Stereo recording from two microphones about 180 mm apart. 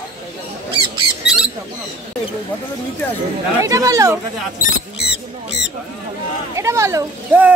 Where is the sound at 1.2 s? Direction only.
5° right (ahead or behind).